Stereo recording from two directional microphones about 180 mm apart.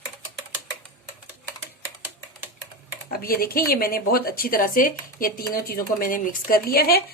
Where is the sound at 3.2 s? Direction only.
55° left (ahead or behind).